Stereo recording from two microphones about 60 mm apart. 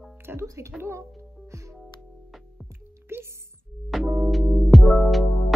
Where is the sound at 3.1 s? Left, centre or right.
Right.